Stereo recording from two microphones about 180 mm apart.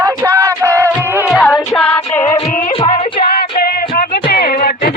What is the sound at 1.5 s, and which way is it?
Music, 10° left (ahead or behind).